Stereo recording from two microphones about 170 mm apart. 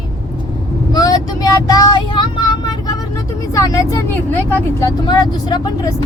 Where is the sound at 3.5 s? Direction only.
20° left (ahead or behind).